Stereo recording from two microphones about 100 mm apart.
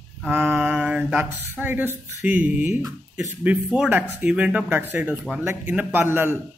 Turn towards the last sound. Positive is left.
turn(degrees=-20)  # may be behind; listen again after turning